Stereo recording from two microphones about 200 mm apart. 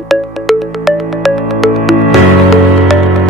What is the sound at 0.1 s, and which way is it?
Music, centre (ahead or behind).